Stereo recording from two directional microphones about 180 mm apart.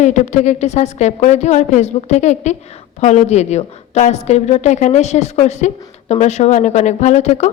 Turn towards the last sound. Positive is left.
turn(degrees=40)  # may be behind; listen again after turning